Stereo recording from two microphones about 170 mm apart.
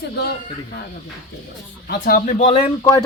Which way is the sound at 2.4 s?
35° left (ahead or behind).